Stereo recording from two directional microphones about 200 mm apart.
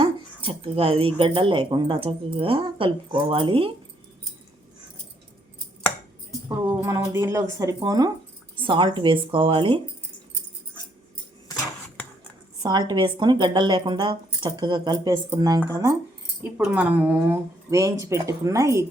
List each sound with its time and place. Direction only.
0.0 s a woman's voice: 25° right (ahead or behind)
6.8 s a woman's voice: 15° right (ahead or behind)
11.4 s cutlery: 15° left (ahead or behind)
12.6 s a woman's voice: 20° right (ahead or behind)